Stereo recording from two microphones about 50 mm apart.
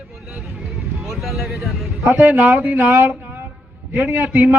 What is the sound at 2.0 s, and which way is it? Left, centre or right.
Speech, right.